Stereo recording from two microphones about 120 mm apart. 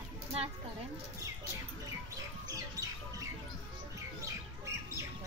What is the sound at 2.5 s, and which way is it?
Music, 30° right (ahead or behind).